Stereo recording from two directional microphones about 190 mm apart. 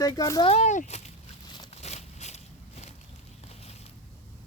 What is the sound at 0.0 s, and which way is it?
Speech, 20° left (ahead or behind).